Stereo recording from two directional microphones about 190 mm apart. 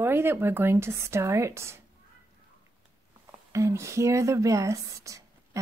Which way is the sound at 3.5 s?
15° right (ahead or behind).